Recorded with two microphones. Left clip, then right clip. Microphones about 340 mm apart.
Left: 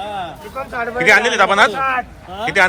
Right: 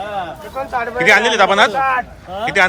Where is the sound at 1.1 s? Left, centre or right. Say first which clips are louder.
Even; centre.